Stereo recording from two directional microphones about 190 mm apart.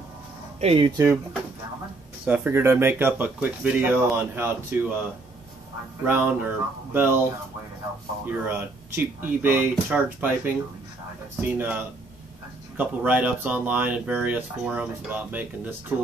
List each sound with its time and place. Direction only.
0.6 s speech: 30° right (ahead or behind)
2.2 s speech: 10° right (ahead or behind)
6.0 s speech: 10° right (ahead or behind)
8.3 s speech: 10° right (ahead or behind)